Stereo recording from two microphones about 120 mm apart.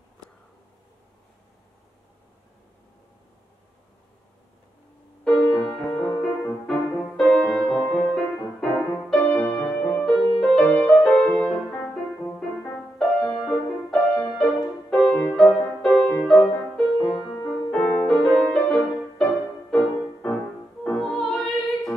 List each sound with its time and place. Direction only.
5.2 s music: 5° left (ahead or behind)
6.1 s music: 15° left (ahead or behind)
7.2 s music: 5° left (ahead or behind)